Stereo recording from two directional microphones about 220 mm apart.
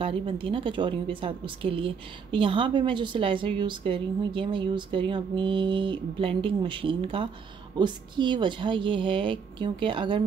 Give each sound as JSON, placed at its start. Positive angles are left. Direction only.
{"t": 0.0, "sound": "a woman's voice", "side_deg": -25}